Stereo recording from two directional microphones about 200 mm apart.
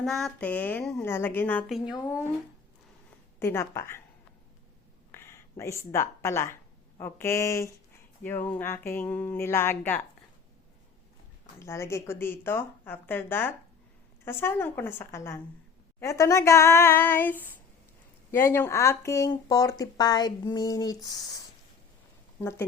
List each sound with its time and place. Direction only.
0.0 s speech: centre (ahead or behind)
3.4 s speech: 10° left (ahead or behind)
5.1 s speech: 10° left (ahead or behind)
11.6 s speech: 15° left (ahead or behind)
22.4 s speech: 10° left (ahead or behind)